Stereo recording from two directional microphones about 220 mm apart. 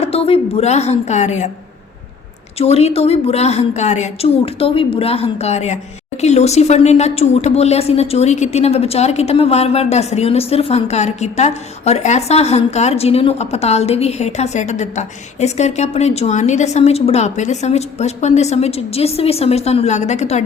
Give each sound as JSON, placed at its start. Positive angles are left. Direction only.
{"t": 0.0, "sound": "a woman's voice", "side_deg": 25}
{"t": 2.6, "sound": "a woman's voice", "side_deg": 30}